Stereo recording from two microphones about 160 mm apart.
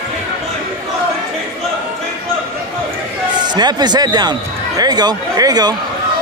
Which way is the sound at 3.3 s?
25° right (ahead or behind).